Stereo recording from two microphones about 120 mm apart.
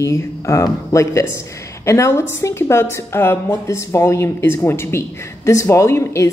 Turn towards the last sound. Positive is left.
turn(degrees=25)  # may be behind; listen again after turning